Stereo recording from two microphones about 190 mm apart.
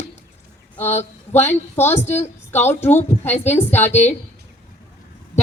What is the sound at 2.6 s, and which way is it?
A woman's voice, 10° left (ahead or behind).